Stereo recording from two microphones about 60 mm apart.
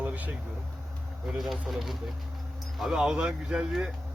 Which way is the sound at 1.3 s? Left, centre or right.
Centre.